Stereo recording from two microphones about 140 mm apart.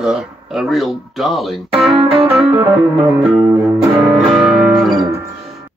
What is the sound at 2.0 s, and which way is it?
Music, 45° right (ahead or behind).